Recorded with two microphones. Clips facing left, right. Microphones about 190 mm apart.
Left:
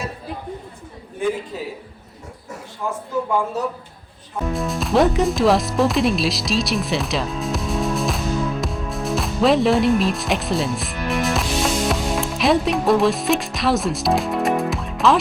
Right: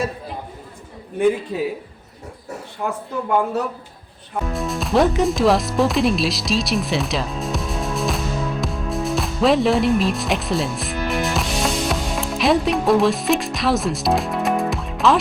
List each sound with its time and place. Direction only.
1.5 s a man's voice: 65° right (ahead or behind)
4.5 s speech: centre (ahead or behind)